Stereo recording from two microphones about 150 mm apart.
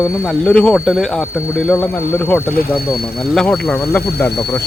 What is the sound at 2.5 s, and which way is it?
Speech, 85° left.